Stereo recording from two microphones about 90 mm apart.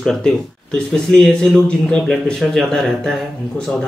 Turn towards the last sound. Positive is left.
turn(degrees=5)  # may be behind; listen again after turning